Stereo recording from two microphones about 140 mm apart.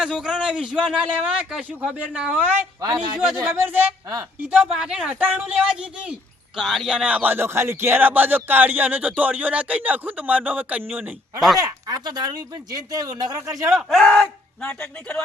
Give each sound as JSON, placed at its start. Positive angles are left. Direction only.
{"t": 0.0, "sound": "speech", "side_deg": -5}
{"t": 2.8, "sound": "a man's voice", "side_deg": -35}
{"t": 3.2, "sound": "speech", "side_deg": -10}
{"t": 11.3, "sound": "speech", "side_deg": 0}
{"t": 11.6, "sound": "speech", "side_deg": -30}
{"t": 13.7, "sound": "speech", "side_deg": 0}